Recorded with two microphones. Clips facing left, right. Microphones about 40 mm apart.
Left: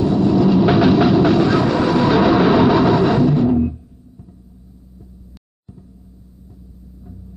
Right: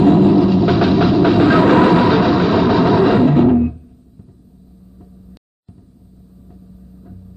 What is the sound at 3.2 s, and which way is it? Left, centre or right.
Music, right.